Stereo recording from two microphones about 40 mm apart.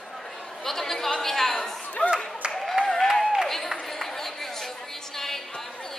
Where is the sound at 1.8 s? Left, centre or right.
Left.